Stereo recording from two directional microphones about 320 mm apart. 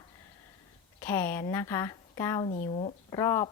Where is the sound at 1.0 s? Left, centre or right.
Centre.